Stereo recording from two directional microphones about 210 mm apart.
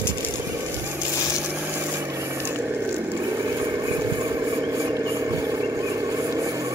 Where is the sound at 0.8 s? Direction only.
5° right (ahead or behind).